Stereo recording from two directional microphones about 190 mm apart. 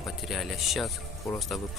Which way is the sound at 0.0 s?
Centre (ahead or behind).